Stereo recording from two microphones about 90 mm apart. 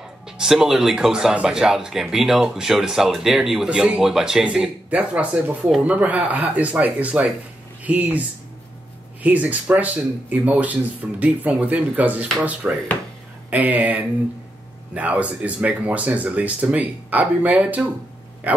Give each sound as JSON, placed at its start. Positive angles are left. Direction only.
{"t": 0.4, "sound": "speech", "side_deg": -5}
{"t": 9.2, "sound": "speech", "side_deg": -15}